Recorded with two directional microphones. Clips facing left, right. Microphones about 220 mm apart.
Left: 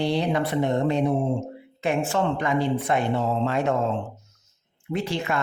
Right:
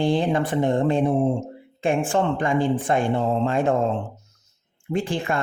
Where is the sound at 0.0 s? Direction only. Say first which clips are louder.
Right 2 dB; 50° right (ahead or behind).